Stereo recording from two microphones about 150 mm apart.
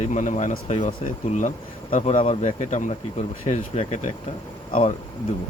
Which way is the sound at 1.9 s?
40° left (ahead or behind).